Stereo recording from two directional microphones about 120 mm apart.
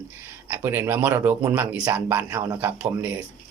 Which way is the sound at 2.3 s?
25° right (ahead or behind).